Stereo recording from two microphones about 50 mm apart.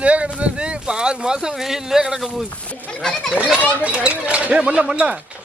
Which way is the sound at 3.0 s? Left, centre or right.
Centre.